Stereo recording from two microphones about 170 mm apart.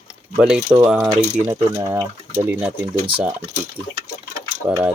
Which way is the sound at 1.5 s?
20° right (ahead or behind).